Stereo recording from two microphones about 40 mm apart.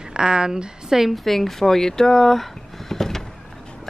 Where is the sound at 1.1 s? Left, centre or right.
Centre.